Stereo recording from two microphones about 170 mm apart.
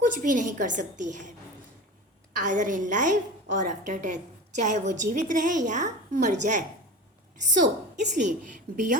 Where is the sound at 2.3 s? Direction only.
45° right (ahead or behind).